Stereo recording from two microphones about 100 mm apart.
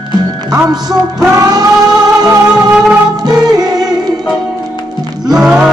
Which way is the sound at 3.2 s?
40° right (ahead or behind).